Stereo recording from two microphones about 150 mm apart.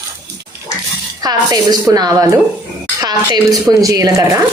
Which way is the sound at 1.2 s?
25° right (ahead or behind).